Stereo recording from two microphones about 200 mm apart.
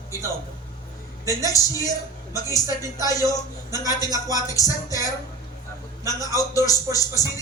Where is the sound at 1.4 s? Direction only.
15° left (ahead or behind).